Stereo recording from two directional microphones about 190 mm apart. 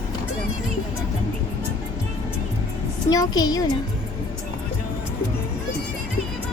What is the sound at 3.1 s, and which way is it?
Speech, 20° left (ahead or behind).